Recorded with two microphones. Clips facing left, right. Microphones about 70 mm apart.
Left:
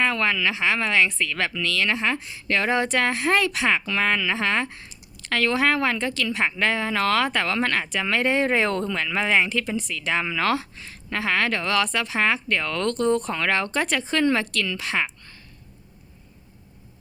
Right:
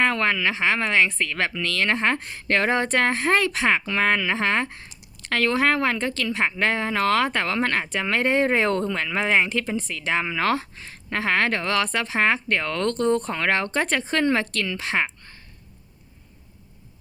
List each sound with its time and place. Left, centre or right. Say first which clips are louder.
0.0 s speech: right 1 dB; right